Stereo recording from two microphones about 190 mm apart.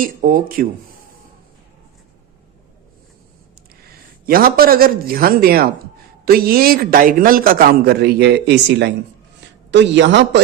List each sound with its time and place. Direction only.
0.0 s a man's voice: 45° right (ahead or behind)
4.3 s a man's voice: 50° right (ahead or behind); by 10.4 s 70° right (ahead or behind)